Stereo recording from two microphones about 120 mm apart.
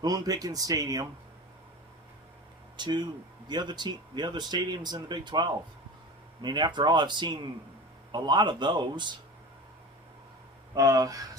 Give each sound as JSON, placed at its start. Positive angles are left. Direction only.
{"t": 0.0, "sound": "speech", "side_deg": -30}
{"t": 2.7, "sound": "speech", "side_deg": -40}
{"t": 10.8, "sound": "speech", "side_deg": -30}